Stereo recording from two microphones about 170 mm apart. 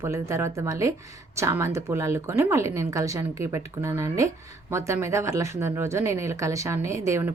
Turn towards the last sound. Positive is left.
turn(degrees=-15)  # may be behind; listen again after turning